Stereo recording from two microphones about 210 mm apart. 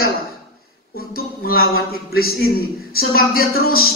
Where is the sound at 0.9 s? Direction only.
45° left (ahead or behind).